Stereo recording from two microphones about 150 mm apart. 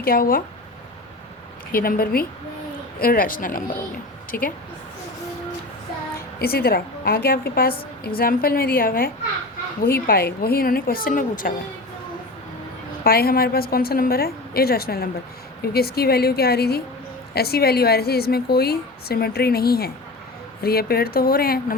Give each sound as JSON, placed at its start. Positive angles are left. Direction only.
{"t": 0.0, "sound": "speech", "side_deg": 75}
{"t": 1.7, "sound": "speech", "side_deg": 75}
{"t": 6.4, "sound": "a woman's voice", "side_deg": 90}
{"t": 13.1, "sound": "a woman's voice", "side_deg": 85}